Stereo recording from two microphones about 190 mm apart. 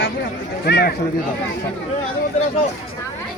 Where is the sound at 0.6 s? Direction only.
55° left (ahead or behind).